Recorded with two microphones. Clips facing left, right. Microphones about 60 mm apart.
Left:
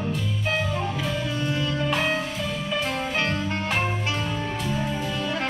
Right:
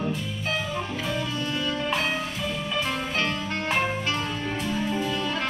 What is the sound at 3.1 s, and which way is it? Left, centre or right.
Music, centre.